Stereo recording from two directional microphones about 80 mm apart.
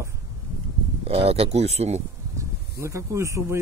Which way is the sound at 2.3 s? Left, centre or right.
Right.